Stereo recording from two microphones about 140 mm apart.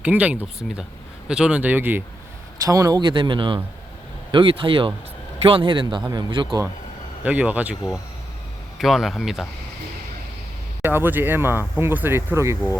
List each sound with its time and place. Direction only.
0.0 s speech: 10° right (ahead or behind)
2.6 s a man's voice: 25° right (ahead or behind)
7.3 s speech: 10° right (ahead or behind)
8.8 s speech: centre (ahead or behind)
10.8 s speech: 15° right (ahead or behind)